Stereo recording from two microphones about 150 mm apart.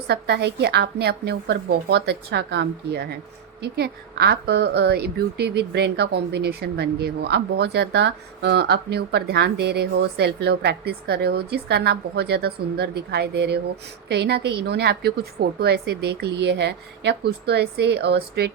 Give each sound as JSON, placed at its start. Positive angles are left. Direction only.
{"t": 0.1, "sound": "a woman's voice", "side_deg": -90}